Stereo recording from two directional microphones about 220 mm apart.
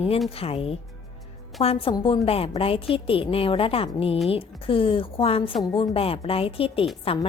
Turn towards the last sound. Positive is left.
turn(degrees=25)  # may be behind; listen again after turning